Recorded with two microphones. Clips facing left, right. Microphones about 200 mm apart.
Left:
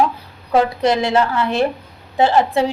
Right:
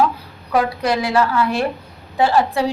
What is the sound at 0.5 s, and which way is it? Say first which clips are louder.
A woman's voice: left 3 dB; 25° left (ahead or behind).